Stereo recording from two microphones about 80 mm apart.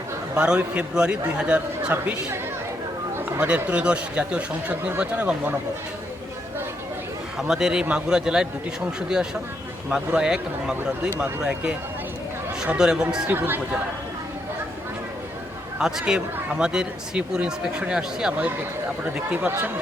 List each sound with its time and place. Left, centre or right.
0.3 s speech: centre
1.9 s speech: right
3.4 s speech: centre
7.3 s speech: centre
13.3 s speech: right
15.8 s speech: centre